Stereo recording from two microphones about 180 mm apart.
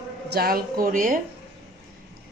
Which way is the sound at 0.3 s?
55° right (ahead or behind).